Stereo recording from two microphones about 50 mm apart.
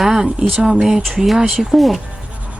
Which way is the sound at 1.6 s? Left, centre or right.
Centre.